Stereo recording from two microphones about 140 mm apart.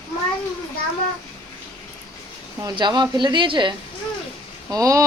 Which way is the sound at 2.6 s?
30° right (ahead or behind).